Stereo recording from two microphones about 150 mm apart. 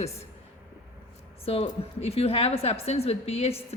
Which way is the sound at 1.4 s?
40° left (ahead or behind).